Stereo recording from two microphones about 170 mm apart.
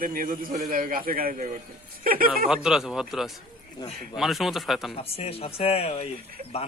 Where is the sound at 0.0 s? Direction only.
55° right (ahead or behind).